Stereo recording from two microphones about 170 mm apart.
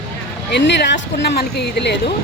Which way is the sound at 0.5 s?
85° left.